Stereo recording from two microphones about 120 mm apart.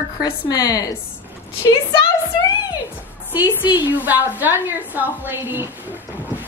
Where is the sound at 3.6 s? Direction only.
15° right (ahead or behind).